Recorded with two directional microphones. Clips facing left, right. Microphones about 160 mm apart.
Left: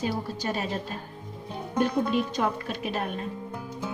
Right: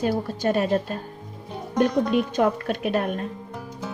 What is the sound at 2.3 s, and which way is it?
Speech, 60° right (ahead or behind).